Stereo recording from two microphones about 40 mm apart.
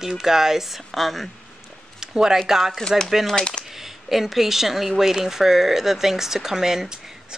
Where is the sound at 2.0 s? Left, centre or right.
Centre.